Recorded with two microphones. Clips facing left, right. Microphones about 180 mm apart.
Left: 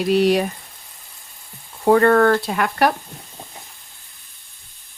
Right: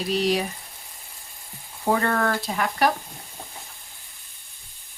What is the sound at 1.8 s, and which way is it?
Frying, 60° left (ahead or behind).